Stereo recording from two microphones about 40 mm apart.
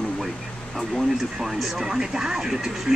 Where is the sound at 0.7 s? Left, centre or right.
Centre.